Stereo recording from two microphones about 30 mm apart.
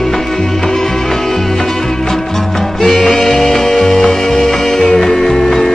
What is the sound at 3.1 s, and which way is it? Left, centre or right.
Music, centre.